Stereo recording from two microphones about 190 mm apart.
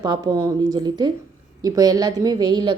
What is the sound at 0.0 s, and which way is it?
A woman's voice, 20° right (ahead or behind).